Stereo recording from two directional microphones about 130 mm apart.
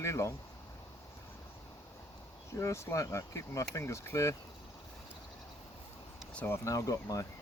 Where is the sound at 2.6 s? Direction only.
20° left (ahead or behind).